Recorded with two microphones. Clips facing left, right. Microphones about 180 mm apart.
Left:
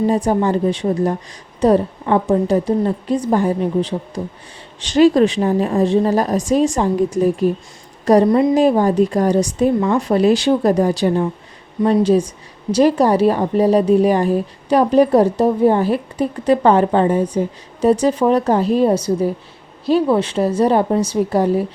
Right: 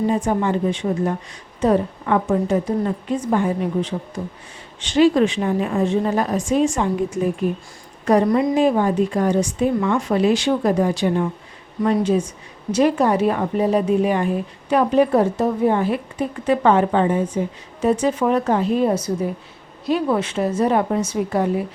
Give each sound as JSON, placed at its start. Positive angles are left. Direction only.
{"t": 0.1, "sound": "speech", "side_deg": 35}